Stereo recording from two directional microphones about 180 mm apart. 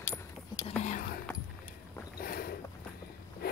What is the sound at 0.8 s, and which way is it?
Whispering, 50° left (ahead or behind).